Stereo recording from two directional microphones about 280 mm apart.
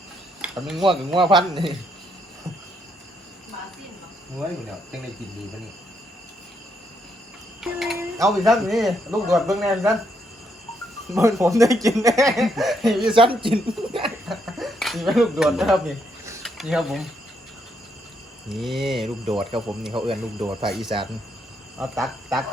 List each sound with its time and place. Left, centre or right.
0.4 s a sound: centre
0.8 s speech: centre
7.6 s speech: centre
11.1 s speech: centre
12.4 s speech: centre
13.1 s speech: centre
14.0 s speech: centre
18.4 s speech: centre